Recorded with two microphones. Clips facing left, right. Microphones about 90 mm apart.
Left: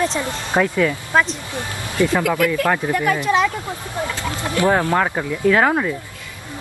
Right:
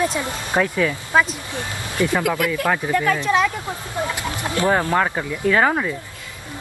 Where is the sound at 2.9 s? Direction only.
15° left (ahead or behind).